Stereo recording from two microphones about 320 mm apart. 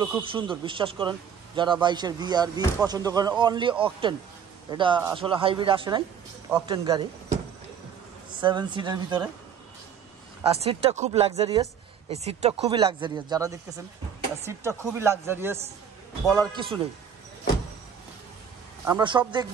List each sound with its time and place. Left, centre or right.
0.0 s a man's voice: centre
8.4 s a man's voice: centre
10.4 s a man's voice: centre
18.9 s a man's voice: centre